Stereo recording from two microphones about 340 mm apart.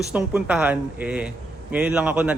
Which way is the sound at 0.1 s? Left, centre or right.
Centre.